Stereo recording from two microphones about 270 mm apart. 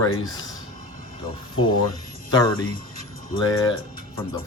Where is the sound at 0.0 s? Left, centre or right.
Centre.